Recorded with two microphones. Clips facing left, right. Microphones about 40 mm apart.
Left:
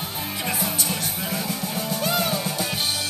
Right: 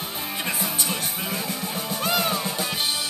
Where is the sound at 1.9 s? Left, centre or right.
Right.